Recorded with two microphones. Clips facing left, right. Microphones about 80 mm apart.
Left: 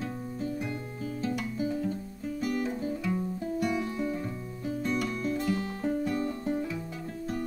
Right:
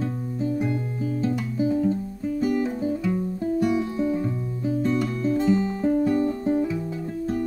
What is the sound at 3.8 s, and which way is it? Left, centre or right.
Music, centre.